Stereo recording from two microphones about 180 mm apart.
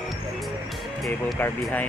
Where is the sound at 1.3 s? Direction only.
10° left (ahead or behind).